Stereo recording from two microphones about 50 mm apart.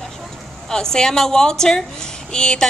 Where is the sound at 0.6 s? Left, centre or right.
Centre.